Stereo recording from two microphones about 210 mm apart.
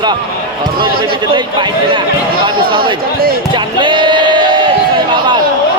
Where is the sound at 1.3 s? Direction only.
20° right (ahead or behind).